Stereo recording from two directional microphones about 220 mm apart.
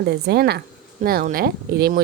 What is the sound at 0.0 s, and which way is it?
Speech, 50° right (ahead or behind).